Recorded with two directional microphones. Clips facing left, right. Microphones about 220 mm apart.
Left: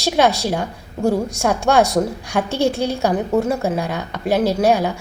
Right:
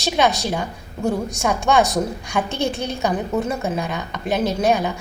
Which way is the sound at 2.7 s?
10° left (ahead or behind).